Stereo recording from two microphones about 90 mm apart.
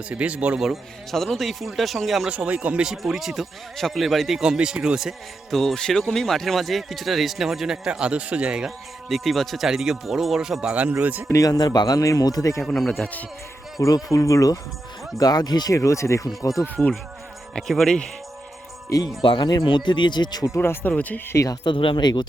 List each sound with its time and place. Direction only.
0.1 s speech: 15° right (ahead or behind)
2.3 s speech: 15° right (ahead or behind)
11.3 s speech: 40° left (ahead or behind)
12.6 s speech: centre (ahead or behind)
13.7 s speech: 40° left (ahead or behind)
16.8 s speech: 5° right (ahead or behind)
18.9 s speech: 45° left (ahead or behind)
19.2 s speech: 70° left (ahead or behind)
19.6 s speech: 60° left (ahead or behind)
20.5 s speech: 25° left (ahead or behind)
21.3 s speech: 40° left (ahead or behind)
21.6 s speech: 70° left (ahead or behind)